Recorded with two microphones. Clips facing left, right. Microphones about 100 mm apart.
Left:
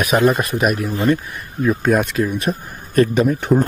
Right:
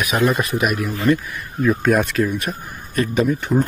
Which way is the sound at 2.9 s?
40° left (ahead or behind).